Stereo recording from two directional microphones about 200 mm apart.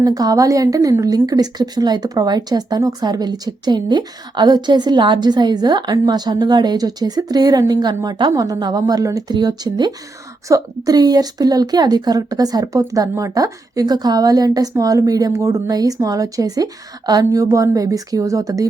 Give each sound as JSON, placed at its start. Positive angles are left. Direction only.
{"t": 0.0, "sound": "a woman's voice", "side_deg": -20}